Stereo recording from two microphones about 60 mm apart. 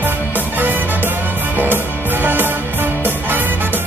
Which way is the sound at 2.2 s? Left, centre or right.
Right.